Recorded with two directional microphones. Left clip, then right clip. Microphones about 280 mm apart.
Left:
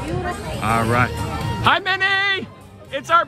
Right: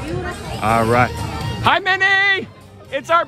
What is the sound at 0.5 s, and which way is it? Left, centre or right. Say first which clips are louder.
Speech: right 4 dB; centre.